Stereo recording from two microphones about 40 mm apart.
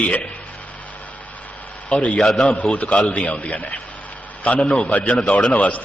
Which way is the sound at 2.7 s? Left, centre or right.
Left.